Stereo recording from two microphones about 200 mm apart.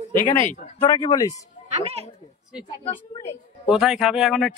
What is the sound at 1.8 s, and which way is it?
Speech, 30° right (ahead or behind).